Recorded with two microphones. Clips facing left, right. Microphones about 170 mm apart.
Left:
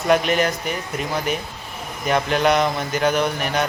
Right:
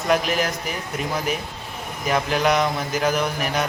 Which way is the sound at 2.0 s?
Centre (ahead or behind).